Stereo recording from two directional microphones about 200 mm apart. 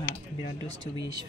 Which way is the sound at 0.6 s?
20° right (ahead or behind).